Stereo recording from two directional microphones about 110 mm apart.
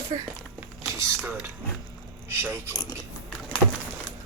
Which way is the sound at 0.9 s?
25° right (ahead or behind).